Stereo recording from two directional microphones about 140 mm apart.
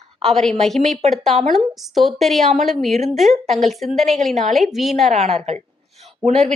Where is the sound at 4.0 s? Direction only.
55° right (ahead or behind).